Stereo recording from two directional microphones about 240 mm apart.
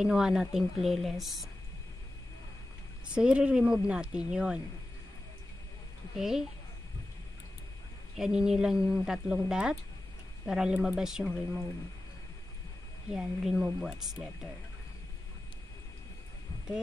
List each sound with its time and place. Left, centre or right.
0.0 s a woman's voice: centre
3.2 s a woman's voice: centre
6.1 s a woman's voice: centre
8.2 s a woman's voice: centre
13.1 s a woman's voice: centre